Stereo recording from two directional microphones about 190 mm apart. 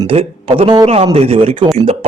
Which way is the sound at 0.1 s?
30° right (ahead or behind).